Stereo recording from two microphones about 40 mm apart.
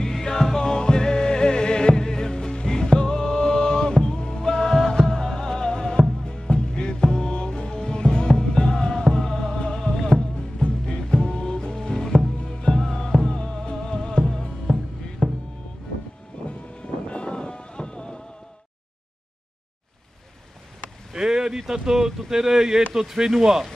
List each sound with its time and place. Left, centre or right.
0.0 s music: centre
12.4 s music: left
12.7 s music: centre
16.3 s vehicle: left
16.8 s music: left
21.1 s a sound: centre
22.3 s speech: centre